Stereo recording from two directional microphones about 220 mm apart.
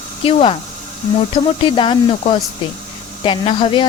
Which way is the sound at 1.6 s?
20° left (ahead or behind).